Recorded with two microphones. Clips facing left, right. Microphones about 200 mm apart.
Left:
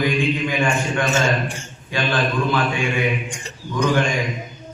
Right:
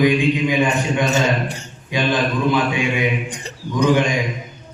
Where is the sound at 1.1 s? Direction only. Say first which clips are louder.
Right 1 dB; 40° right (ahead or behind).